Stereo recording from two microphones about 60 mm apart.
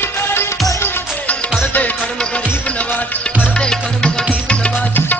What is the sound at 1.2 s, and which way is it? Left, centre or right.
Music, left.